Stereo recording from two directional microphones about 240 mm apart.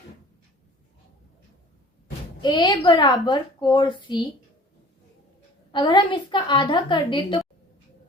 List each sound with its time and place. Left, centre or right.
2.4 s a woman's voice: centre
5.7 s a woman's voice: centre